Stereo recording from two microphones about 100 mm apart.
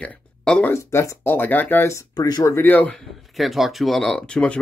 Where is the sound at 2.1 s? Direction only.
40° left (ahead or behind).